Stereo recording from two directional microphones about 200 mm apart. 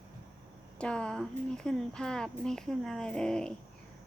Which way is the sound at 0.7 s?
5° left (ahead or behind).